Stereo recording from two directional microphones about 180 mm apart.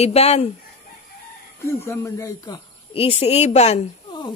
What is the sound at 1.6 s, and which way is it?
A woman's voice, 15° left (ahead or behind).